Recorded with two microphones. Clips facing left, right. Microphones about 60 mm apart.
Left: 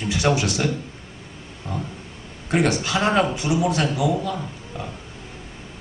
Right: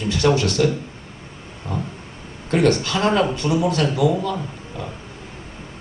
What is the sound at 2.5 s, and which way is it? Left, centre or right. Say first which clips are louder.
A man's voice: right 3 dB; centre.